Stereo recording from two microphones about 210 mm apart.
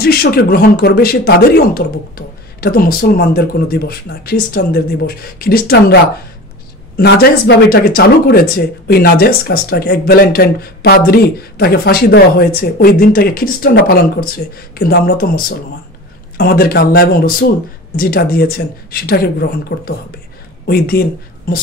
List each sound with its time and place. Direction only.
0.0 s speech: 45° left (ahead or behind)
19.7 s speech: 55° left (ahead or behind)
20.6 s speech: 45° left (ahead or behind)